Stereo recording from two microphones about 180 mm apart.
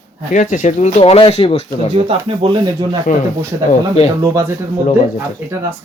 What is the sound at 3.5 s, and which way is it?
Speech, 20° right (ahead or behind).